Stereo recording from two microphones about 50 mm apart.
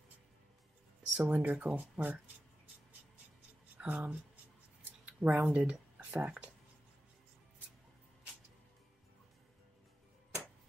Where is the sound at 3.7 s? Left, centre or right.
Right.